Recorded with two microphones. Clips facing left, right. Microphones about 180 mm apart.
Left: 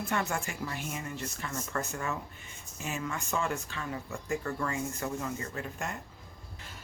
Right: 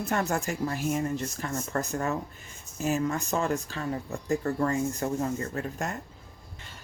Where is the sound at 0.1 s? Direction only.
40° right (ahead or behind).